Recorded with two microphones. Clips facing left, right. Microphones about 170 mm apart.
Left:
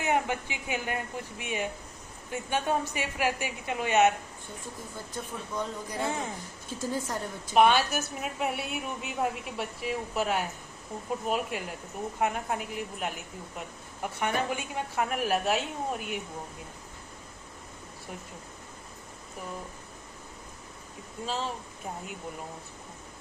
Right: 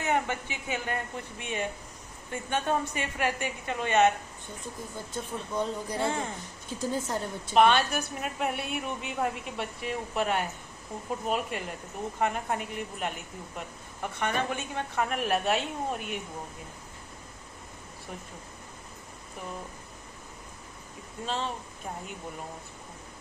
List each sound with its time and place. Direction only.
0.0 s a woman's voice: 10° left (ahead or behind)
5.1 s speech: 25° right (ahead or behind)
7.5 s a woman's voice: 5° left (ahead or behind)
21.2 s a woman's voice: 5° left (ahead or behind)